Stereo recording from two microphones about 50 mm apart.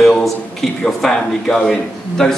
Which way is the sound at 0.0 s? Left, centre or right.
Centre.